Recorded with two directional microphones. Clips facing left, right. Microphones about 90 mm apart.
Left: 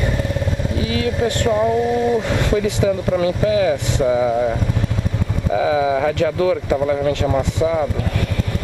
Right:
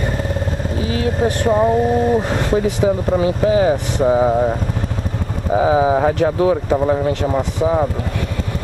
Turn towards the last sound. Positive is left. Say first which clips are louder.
# right 1 dB
turn(degrees=-35)  # may be behind; listen again after turning